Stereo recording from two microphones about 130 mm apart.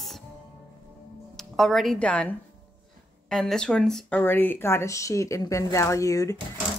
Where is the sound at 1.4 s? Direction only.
Centre (ahead or behind).